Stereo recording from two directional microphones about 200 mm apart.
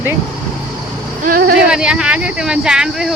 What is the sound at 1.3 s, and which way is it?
Speech, 45° right (ahead or behind).